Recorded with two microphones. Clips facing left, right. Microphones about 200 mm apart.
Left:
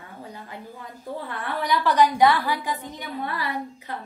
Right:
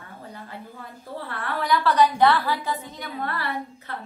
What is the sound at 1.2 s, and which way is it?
A woman's voice, 15° left (ahead or behind).